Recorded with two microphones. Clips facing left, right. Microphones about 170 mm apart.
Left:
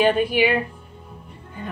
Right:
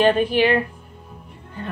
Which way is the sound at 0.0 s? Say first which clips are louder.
Right 1 dB; 10° left (ahead or behind).